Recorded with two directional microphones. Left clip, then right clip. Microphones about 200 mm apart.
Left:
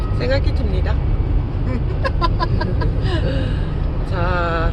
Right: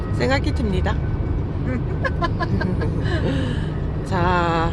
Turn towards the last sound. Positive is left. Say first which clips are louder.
# right 1 dB
turn(degrees=-30)  # may be behind; listen again after turning